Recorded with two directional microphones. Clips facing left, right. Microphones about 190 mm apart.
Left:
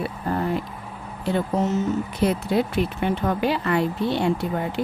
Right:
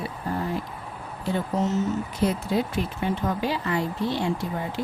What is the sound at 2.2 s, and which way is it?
Speech, 65° left (ahead or behind).